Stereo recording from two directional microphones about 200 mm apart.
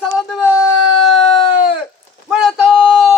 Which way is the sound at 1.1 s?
25° left (ahead or behind).